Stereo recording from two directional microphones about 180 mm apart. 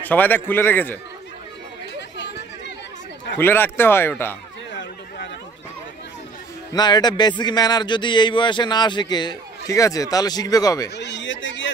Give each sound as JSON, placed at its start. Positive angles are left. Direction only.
{"t": 0.0, "sound": "speech", "side_deg": 10}
{"t": 2.1, "sound": "chatter", "side_deg": 75}
{"t": 3.3, "sound": "speech", "side_deg": 10}
{"t": 6.7, "sound": "a man's voice", "side_deg": 25}
{"t": 11.0, "sound": "a sound", "side_deg": 75}